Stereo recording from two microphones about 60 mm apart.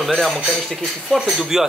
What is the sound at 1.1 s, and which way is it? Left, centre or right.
Speech, centre.